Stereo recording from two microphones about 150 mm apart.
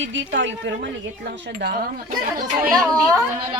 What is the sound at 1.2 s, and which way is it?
Speech, 90° right.